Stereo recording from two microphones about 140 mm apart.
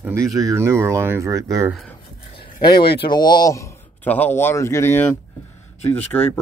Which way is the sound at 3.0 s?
30° left (ahead or behind).